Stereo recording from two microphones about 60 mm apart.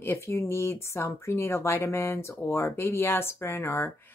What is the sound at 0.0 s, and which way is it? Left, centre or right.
Speech, left.